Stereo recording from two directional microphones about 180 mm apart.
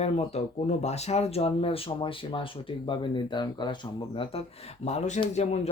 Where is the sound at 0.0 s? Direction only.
35° left (ahead or behind).